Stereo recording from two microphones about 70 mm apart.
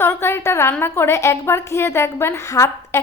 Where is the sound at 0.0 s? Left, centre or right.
Left.